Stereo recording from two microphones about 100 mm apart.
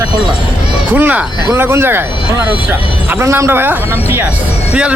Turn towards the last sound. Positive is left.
turn(degrees=-20)  # may be behind; listen again after turning